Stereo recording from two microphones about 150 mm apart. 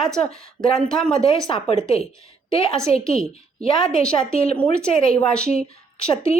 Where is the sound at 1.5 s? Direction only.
35° left (ahead or behind).